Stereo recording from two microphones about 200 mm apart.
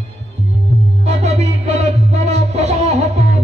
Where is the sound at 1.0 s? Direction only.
35° right (ahead or behind).